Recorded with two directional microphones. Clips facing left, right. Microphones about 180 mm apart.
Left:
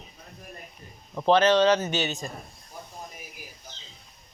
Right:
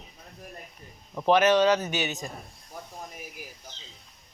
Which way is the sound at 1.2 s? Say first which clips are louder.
Left 1 dB; 15° right (ahead or behind).